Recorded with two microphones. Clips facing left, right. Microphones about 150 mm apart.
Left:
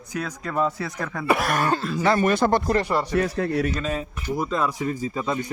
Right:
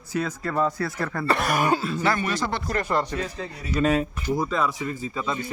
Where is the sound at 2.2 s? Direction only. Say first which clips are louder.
Left 7 dB; 50° left (ahead or behind).